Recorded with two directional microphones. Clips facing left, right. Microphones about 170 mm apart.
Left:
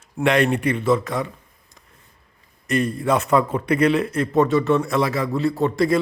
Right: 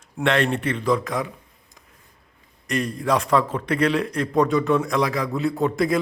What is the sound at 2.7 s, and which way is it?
A man's voice, 5° left (ahead or behind).